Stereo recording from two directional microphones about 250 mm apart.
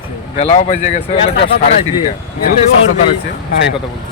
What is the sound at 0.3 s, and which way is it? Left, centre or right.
Speech, left.